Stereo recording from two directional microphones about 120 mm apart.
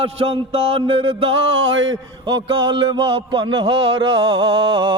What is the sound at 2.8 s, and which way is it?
Music, 45° right (ahead or behind).